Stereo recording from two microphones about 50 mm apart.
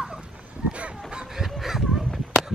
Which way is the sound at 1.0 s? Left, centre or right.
Centre.